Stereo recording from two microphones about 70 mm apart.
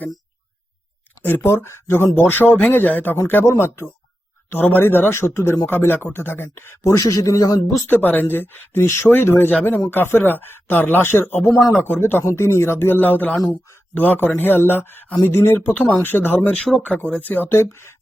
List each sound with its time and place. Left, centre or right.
1.2 s speech: left
3.4 s speech: left
4.6 s speech: left
6.9 s a man's voice: left
7.9 s speech: left
13.4 s a man's voice: left
13.9 s speech: left
17.6 s speech: left